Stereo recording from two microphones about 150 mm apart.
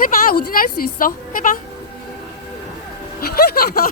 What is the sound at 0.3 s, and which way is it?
Speech, 70° left (ahead or behind).